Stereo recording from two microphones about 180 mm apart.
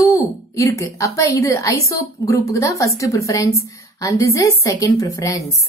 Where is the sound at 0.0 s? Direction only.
15° left (ahead or behind).